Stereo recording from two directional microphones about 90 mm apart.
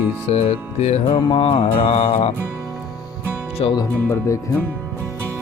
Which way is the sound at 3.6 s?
90° left.